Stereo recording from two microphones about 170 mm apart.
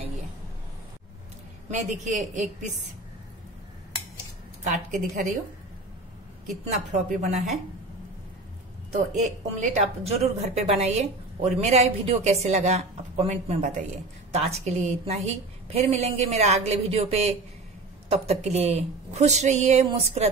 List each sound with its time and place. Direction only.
1.7 s a man's voice: 45° right (ahead or behind)
4.6 s a man's voice: 50° right (ahead or behind)
6.6 s a man's voice: 40° right (ahead or behind)
9.2 s a woman's voice: 45° right (ahead or behind)